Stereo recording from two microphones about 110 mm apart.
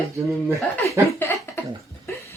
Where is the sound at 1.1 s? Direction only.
20° left (ahead or behind).